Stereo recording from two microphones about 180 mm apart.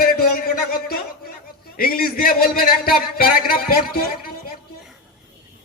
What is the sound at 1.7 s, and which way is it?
A man's voice, 55° left (ahead or behind).